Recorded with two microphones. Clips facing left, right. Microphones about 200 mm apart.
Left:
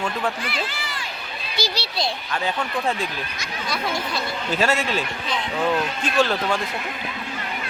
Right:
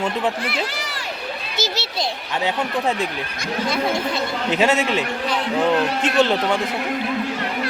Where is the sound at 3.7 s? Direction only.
20° right (ahead or behind).